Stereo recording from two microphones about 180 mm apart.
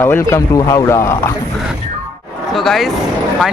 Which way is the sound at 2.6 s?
Centre (ahead or behind).